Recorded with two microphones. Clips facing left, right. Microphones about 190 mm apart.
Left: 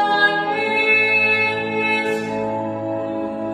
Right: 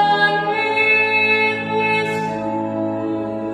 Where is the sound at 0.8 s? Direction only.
55° right (ahead or behind).